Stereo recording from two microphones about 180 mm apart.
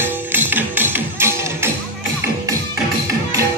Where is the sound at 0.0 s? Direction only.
10° right (ahead or behind).